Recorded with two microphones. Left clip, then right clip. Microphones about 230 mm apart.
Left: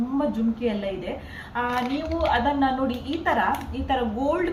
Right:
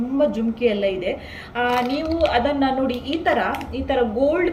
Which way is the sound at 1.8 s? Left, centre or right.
Right.